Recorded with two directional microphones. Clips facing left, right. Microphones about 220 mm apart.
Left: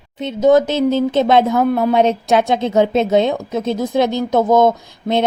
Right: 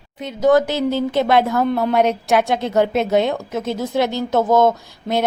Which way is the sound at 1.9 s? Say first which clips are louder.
Left 2 dB; 20° left (ahead or behind).